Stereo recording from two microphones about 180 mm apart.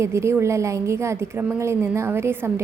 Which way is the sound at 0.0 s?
15° right (ahead or behind).